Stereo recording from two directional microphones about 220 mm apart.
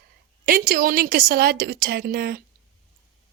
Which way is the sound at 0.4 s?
40° right (ahead or behind).